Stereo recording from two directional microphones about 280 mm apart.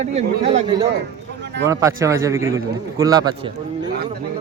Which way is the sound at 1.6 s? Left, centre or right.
Centre.